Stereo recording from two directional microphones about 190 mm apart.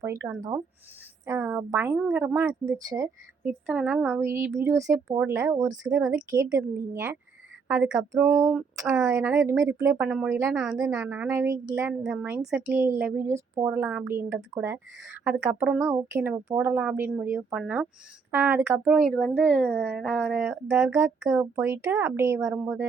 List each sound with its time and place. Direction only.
0.0 s a woman's voice: 15° right (ahead or behind)
9.0 s speech: 15° right (ahead or behind)
10.5 s a woman's voice: 5° right (ahead or behind)
19.1 s a woman's voice: 5° left (ahead or behind)
20.7 s speech: 15° right (ahead or behind)